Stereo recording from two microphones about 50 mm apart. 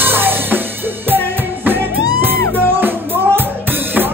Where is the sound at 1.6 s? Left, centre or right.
Right.